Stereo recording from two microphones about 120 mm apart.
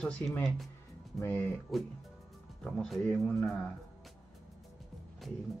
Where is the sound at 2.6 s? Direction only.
5° left (ahead or behind).